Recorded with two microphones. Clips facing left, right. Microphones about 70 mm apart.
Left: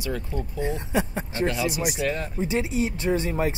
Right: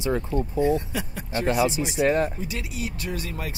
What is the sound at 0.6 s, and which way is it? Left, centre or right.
Speech, left.